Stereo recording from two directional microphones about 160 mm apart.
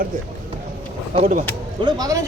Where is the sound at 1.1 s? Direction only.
50° right (ahead or behind).